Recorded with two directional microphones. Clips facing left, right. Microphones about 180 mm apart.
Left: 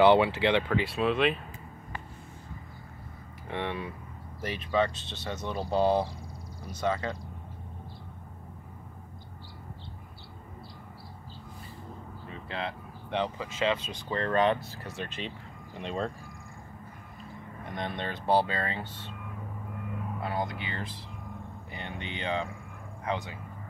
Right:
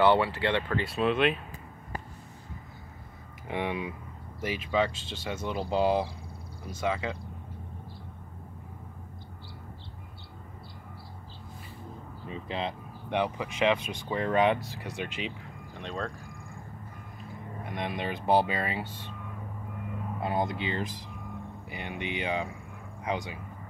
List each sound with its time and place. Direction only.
0.0 s speech: 20° left (ahead or behind)
0.7 s speech: centre (ahead or behind)
3.4 s speech: 15° right (ahead or behind)
12.3 s speech: 15° right (ahead or behind)
15.8 s speech: 10° left (ahead or behind)
17.6 s speech: 5° right (ahead or behind)
20.2 s speech: 20° right (ahead or behind)
21.6 s a sound: 10° right (ahead or behind)
23.0 s speech: 15° right (ahead or behind)